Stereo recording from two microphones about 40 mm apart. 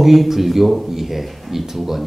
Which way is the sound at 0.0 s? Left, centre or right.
Centre.